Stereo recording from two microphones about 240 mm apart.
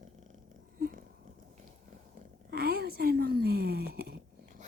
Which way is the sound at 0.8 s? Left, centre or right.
Right.